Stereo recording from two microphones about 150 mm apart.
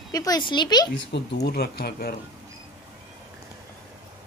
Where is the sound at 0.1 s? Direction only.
25° left (ahead or behind).